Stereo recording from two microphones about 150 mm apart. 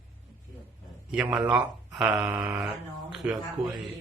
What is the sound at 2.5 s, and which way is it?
Speech, centre (ahead or behind).